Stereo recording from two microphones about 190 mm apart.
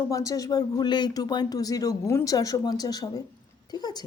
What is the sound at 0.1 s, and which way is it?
Speech, 15° left (ahead or behind).